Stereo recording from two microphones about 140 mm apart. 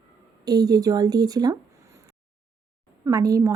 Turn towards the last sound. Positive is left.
turn(degrees=-25)  # may be behind; listen again after turning